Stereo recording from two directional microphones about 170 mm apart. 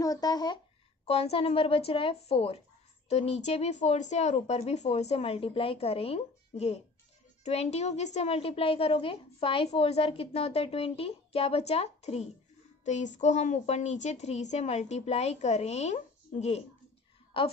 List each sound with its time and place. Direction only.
0.0 s a child's voice: 20° left (ahead or behind)
1.0 s a woman's voice: 35° left (ahead or behind)